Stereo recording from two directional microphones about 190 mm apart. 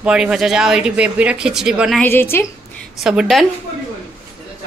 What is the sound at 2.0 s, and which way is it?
Speech, 10° left (ahead or behind).